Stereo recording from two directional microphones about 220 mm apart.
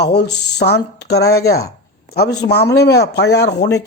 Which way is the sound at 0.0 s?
50° left (ahead or behind).